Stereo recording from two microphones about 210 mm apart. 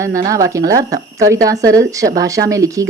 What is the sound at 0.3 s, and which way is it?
Speech, 15° right (ahead or behind).